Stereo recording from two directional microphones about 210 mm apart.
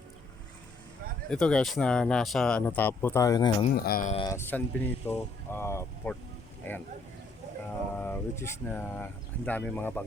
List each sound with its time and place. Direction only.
1.3 s speech: 5° left (ahead or behind); by 3.7 s 20° left (ahead or behind)
3.8 s speech: 45° left (ahead or behind)
4.1 s speech: 20° left (ahead or behind)
4.4 s speech: 10° left (ahead or behind)
7.9 s speech: 10° left (ahead or behind)